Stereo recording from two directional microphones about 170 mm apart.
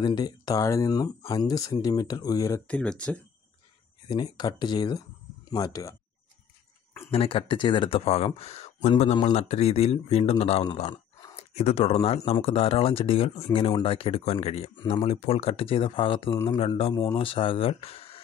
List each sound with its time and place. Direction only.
0.0 s speech: 25° left (ahead or behind)
2.7 s speech: 5° left (ahead or behind)
4.1 s speech: 25° left (ahead or behind)
7.1 s speech: 35° left (ahead or behind)